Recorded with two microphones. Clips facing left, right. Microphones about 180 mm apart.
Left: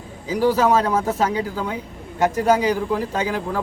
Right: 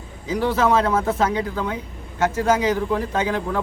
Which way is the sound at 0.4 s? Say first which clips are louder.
Left 3 dB; 35° left (ahead or behind).